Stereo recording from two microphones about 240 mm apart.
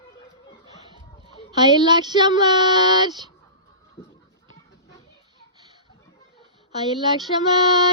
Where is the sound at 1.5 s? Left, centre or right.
Centre.